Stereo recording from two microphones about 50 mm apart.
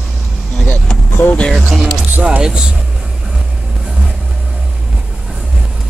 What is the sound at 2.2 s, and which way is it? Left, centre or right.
Speech, centre.